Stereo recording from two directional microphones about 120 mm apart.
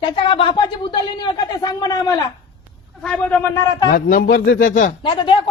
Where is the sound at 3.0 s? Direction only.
10° left (ahead or behind).